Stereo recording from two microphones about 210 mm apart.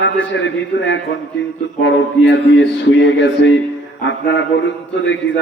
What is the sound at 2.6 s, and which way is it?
A man's voice, 60° left (ahead or behind).